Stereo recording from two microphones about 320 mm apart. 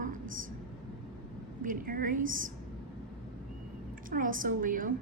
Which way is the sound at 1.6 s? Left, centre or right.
Right.